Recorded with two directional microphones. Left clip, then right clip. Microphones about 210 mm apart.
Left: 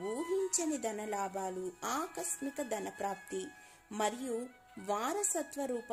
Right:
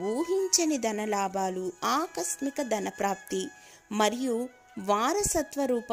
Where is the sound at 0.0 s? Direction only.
15° right (ahead or behind).